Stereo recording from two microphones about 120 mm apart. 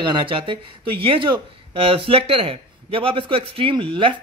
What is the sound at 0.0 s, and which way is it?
Speech, 45° right (ahead or behind).